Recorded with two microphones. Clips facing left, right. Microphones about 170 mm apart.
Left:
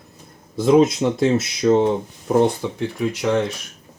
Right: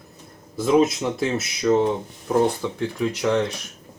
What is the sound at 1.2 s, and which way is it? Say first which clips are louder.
Speech: left 6 dB; 25° left (ahead or behind).